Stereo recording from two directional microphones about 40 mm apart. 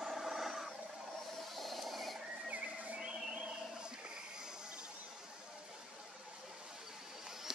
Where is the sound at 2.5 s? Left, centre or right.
Right.